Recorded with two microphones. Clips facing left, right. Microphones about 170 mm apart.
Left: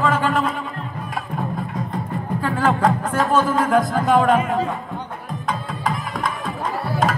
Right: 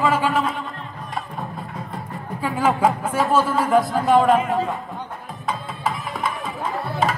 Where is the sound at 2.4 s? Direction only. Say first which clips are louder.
Even; 10° right (ahead or behind).